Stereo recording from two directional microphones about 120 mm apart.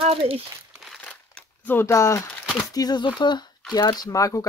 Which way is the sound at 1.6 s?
20° left (ahead or behind).